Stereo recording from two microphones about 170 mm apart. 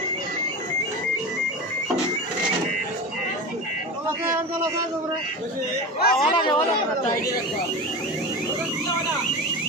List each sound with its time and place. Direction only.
6.0 s a man's voice: 65° left (ahead or behind)
6.3 s speech: 25° left (ahead or behind)